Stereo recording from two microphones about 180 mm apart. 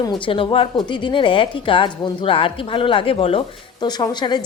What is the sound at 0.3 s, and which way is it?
A woman's voice, 30° left (ahead or behind).